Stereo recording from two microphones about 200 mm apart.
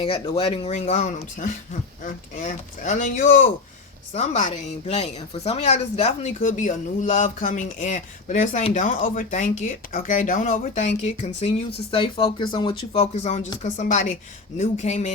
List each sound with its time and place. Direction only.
0.0 s speech: 30° left (ahead or behind)